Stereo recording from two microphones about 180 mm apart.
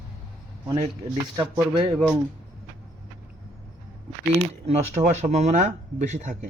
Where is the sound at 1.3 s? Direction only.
25° right (ahead or behind).